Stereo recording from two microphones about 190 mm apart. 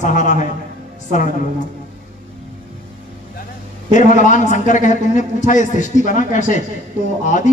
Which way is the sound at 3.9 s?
40° left (ahead or behind).